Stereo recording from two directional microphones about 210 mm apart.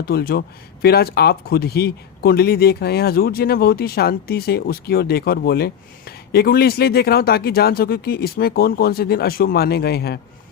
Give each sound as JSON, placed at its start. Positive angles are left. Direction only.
{"t": 0.0, "sound": "speech", "side_deg": 45}